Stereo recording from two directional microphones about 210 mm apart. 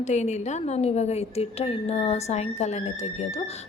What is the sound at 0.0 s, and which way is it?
A woman's voice, 35° left (ahead or behind).